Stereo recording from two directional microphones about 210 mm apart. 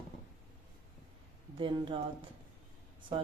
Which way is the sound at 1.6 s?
25° right (ahead or behind).